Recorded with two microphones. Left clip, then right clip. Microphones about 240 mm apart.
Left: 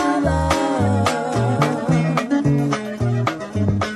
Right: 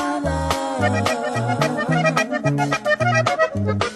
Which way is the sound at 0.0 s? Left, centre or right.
Centre.